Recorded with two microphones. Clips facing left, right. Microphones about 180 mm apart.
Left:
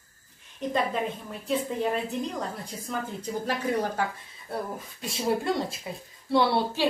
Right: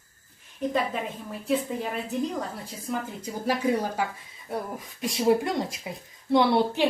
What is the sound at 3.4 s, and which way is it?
A woman's voice, 10° right (ahead or behind).